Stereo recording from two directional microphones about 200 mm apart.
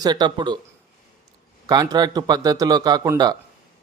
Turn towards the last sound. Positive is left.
turn(degrees=-20)  # may be behind; listen again after turning